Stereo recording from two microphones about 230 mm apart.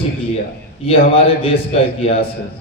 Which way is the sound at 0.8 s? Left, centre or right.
Left.